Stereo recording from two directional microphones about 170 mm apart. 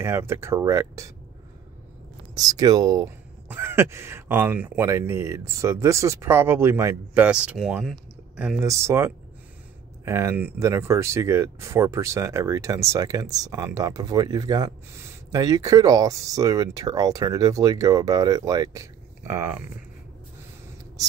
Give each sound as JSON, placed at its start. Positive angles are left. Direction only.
{"t": 0.0, "sound": "speech", "side_deg": -15}
{"t": 2.3, "sound": "speech", "side_deg": -20}
{"t": 8.5, "sound": "speech", "side_deg": -15}